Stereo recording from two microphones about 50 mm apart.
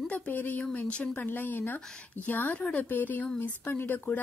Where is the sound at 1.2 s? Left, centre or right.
Left.